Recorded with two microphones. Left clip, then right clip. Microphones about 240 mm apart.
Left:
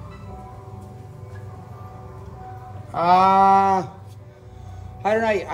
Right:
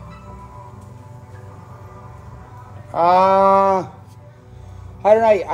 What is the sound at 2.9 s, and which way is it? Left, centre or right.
A man's voice, centre.